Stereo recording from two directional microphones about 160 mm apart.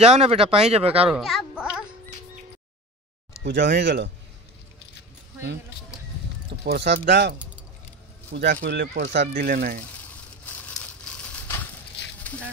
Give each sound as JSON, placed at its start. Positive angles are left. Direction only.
{"t": 0.0, "sound": "speech", "side_deg": -40}
{"t": 1.1, "sound": "speech", "side_deg": -5}
{"t": 3.4, "sound": "speech", "side_deg": -90}
{"t": 6.6, "sound": "speech", "side_deg": -90}
{"t": 10.0, "sound": "a sound", "side_deg": 10}